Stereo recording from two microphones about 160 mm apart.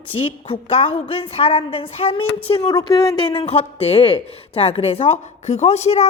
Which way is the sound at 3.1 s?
35° left (ahead or behind).